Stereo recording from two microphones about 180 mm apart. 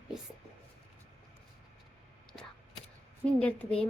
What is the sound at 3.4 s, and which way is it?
Speech, 5° left (ahead or behind).